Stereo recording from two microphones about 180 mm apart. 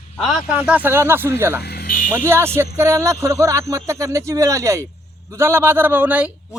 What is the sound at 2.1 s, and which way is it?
Speech, 15° right (ahead or behind).